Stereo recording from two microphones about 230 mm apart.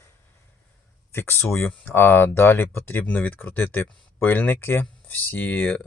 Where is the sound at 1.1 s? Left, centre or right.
Centre.